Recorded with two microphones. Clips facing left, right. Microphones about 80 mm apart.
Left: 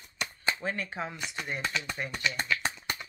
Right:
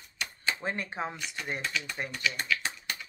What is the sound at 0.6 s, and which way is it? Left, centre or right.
Speech, right.